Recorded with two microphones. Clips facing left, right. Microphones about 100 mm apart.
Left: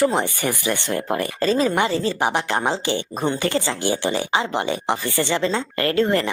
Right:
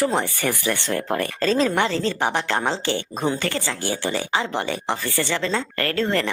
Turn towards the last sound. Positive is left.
turn(degrees=15)  # may be behind; listen again after turning